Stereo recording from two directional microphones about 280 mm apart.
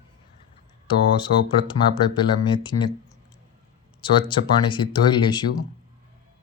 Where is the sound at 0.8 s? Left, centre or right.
Centre.